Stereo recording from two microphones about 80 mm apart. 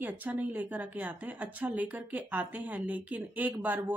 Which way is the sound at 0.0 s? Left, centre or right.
Right.